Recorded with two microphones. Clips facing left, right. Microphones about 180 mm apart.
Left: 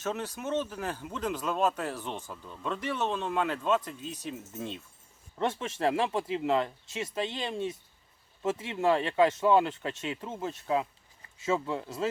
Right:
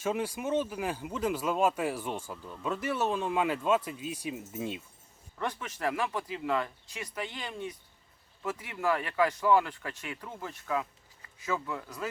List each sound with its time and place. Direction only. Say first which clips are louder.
0.0 s speech: right 2 dB; 10° right (ahead or behind)
5.4 s speech: left 5 dB; 25° left (ahead or behind)